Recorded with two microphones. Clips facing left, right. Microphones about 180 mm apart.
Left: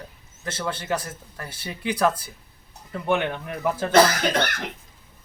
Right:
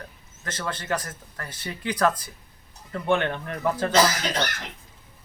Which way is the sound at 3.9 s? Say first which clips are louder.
Left 6 dB; 60° left (ahead or behind).